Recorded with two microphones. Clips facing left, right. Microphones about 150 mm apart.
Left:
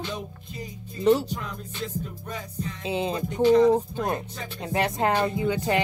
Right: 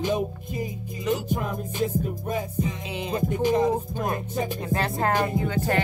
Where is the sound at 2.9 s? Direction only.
30° left (ahead or behind).